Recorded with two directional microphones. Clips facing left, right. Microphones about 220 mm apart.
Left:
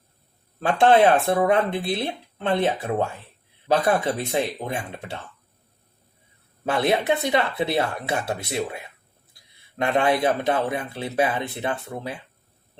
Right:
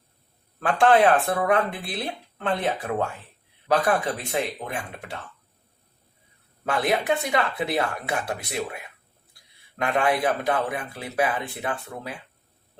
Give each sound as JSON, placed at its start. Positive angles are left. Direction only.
{"t": 0.6, "sound": "speech", "side_deg": 25}
{"t": 6.7, "sound": "speech", "side_deg": 25}